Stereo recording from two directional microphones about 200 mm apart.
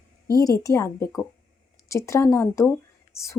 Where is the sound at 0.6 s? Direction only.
15° left (ahead or behind).